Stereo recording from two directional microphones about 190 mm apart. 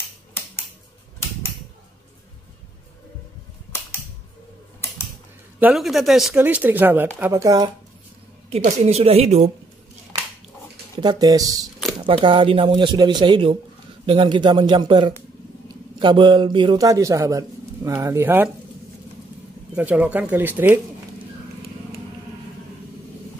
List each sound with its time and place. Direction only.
5.6 s speech: 5° right (ahead or behind); by 7.7 s 20° right (ahead or behind)
8.5 s a woman's voice: 35° right (ahead or behind)
11.0 s a man's voice: 20° right (ahead or behind)
19.7 s speech: 5° right (ahead or behind)